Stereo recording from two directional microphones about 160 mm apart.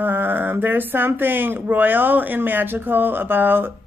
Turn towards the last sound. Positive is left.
turn(degrees=-10)  # may be behind; listen again after turning